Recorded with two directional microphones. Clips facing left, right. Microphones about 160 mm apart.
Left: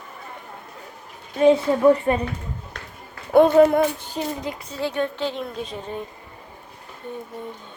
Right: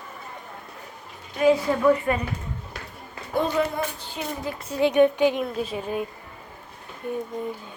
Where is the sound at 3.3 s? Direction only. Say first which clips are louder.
Left 10 dB; 60° left (ahead or behind).